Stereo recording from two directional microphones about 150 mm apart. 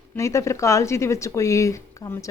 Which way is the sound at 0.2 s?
20° left (ahead or behind).